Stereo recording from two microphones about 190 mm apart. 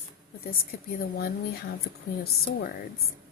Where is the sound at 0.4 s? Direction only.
50° left (ahead or behind).